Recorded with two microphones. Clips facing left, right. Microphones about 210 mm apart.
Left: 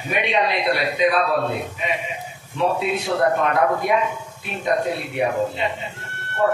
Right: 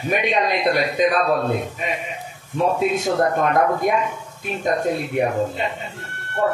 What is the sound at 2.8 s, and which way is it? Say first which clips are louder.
A man's voice: right 2 dB; 45° right (ahead or behind).